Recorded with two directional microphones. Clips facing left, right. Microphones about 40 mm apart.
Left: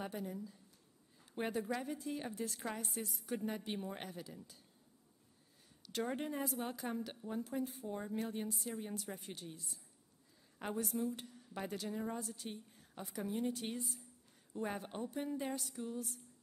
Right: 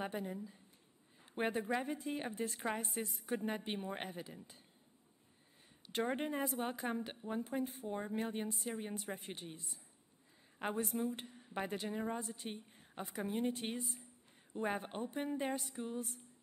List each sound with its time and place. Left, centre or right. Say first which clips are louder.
0.0 s a woman's voice: right 2 dB; right
5.9 s a woman's voice: right 2 dB; right